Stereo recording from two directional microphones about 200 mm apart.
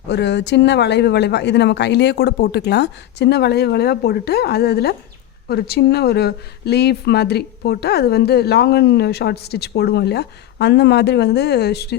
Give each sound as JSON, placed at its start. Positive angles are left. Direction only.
{"t": 0.1, "sound": "speech", "side_deg": 60}